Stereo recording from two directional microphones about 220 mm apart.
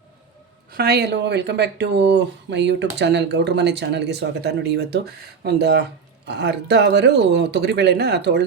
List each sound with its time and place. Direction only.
0.7 s speech: 45° right (ahead or behind)